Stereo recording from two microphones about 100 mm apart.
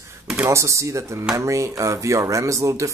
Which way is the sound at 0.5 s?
30° right (ahead or behind).